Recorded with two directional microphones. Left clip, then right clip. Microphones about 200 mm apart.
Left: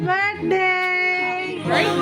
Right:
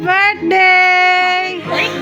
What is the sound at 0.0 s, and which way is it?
Child singing, 5° right (ahead or behind).